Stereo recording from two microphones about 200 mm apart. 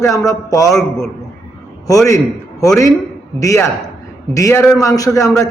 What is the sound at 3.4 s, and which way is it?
Speech, 15° left (ahead or behind).